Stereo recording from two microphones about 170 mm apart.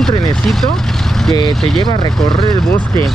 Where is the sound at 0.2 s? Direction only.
Centre (ahead or behind).